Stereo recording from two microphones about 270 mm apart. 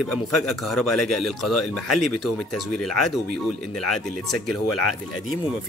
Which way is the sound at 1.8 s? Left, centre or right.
Left.